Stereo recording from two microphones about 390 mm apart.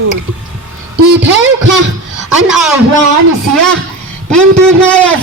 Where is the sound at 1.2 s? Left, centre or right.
Right.